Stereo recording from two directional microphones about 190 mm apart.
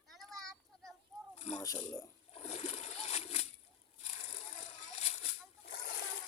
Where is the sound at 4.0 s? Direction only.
35° left (ahead or behind).